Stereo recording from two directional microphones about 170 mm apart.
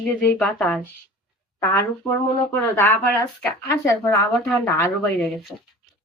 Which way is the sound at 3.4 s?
15° left (ahead or behind).